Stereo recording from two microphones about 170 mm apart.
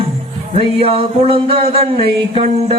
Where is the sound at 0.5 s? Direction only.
35° right (ahead or behind).